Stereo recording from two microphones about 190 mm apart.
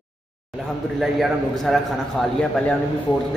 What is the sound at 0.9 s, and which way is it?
A man's voice, centre (ahead or behind).